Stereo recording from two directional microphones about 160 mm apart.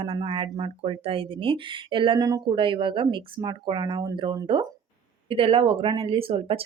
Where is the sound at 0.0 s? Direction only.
35° right (ahead or behind).